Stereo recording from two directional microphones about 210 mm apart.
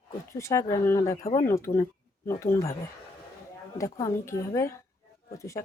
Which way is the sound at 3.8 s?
15° left (ahead or behind).